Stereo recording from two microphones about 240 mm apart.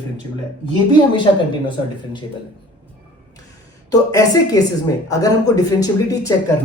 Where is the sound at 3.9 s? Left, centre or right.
Centre.